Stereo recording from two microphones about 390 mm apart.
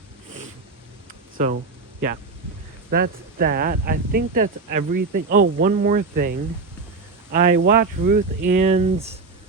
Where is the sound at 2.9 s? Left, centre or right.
Right.